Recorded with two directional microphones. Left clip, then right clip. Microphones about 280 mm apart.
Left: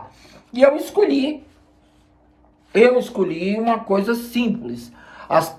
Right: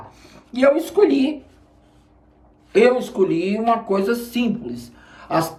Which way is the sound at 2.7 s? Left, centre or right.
Centre.